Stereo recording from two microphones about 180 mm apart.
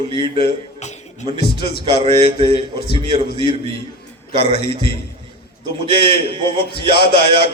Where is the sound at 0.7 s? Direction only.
40° left (ahead or behind).